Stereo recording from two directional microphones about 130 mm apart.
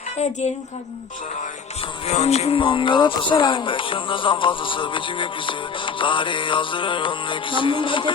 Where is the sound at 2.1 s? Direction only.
55° left (ahead or behind).